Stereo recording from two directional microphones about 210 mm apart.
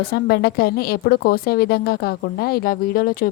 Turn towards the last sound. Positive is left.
turn(degrees=45)  # may be behind; listen again after turning